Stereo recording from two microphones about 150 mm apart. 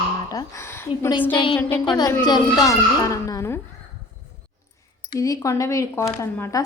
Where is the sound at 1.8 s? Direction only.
30° left (ahead or behind).